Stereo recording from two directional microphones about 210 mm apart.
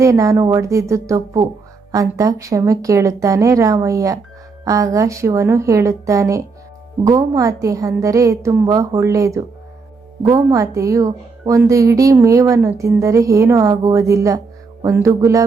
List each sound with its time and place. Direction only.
0.0 s a woman's voice: 15° right (ahead or behind)